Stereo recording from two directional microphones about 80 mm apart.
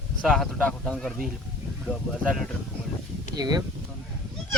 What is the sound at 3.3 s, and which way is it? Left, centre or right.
Speech, right.